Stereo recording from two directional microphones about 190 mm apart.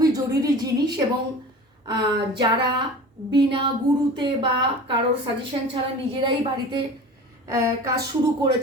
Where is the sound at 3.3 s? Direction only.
25° right (ahead or behind).